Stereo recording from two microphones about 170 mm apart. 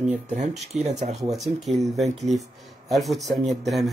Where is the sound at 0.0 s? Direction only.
40° right (ahead or behind).